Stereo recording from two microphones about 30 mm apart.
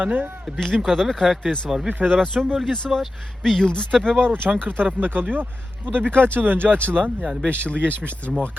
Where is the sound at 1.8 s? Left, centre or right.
Right.